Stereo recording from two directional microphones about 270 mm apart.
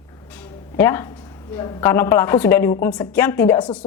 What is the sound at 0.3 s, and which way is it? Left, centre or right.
A woman's voice, centre.